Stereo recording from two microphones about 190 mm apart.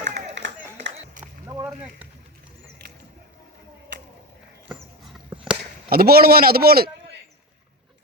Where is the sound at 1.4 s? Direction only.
15° right (ahead or behind).